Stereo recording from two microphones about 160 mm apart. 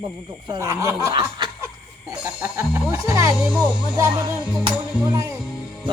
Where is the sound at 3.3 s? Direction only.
5° right (ahead or behind).